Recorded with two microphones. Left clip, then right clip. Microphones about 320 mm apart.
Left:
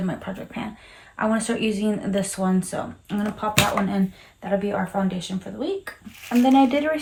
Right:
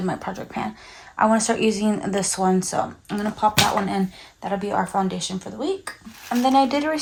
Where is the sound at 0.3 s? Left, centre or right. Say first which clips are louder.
Right 4 dB; centre.